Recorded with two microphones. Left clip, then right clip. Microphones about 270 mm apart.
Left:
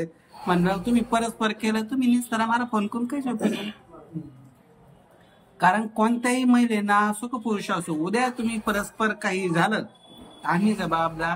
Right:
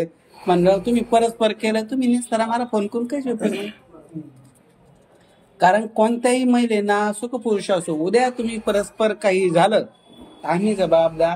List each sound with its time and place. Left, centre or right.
0.0 s speech: centre
5.6 s speech: centre
7.1 s speech: left
7.4 s speech: centre